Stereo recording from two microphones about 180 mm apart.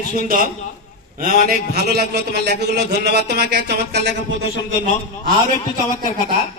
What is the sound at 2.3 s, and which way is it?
A man's voice, 65° right (ahead or behind).